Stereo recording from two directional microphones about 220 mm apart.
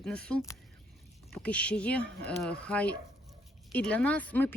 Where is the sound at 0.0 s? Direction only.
5° left (ahead or behind).